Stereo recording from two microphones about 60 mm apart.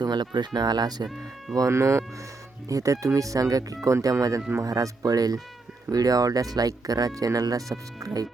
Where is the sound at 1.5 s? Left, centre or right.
Right.